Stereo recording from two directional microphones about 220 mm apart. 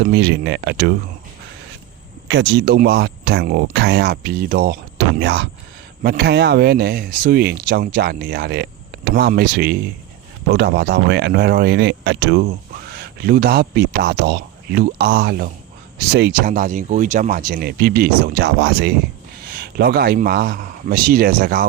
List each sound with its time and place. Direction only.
0.0 s speech: 50° right (ahead or behind)
2.2 s speech: 50° right (ahead or behind)